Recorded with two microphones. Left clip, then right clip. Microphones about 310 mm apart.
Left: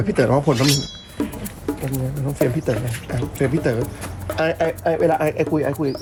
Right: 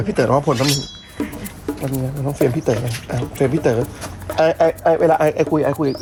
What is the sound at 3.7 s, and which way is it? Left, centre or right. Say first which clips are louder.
Speech: right 4 dB; centre.